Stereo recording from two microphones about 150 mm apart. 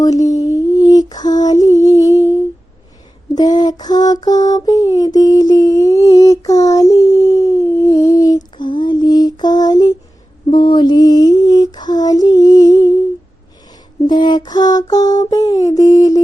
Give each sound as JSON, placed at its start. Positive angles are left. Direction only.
{"t": 0.0, "sound": "mantra", "side_deg": 25}
{"t": 0.5, "sound": "lullaby", "side_deg": 25}
{"t": 3.3, "sound": "lullaby", "side_deg": 25}
{"t": 10.5, "sound": "music", "side_deg": 30}
{"t": 14.1, "sound": "mantra", "side_deg": 30}